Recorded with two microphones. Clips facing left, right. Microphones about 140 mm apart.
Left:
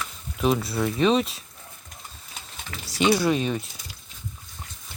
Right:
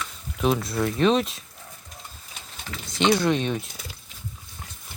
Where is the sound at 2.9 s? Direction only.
10° left (ahead or behind).